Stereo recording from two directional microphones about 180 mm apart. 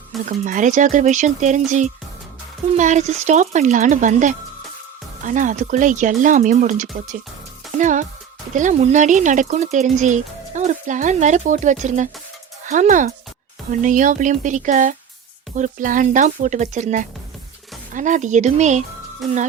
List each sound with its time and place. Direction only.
0.3 s speech: 45° right (ahead or behind)